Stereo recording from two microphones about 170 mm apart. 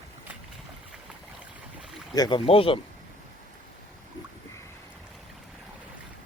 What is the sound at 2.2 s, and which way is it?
Speech, 30° left (ahead or behind).